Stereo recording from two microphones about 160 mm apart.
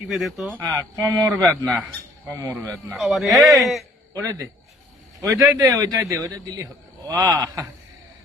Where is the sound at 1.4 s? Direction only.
5° left (ahead or behind).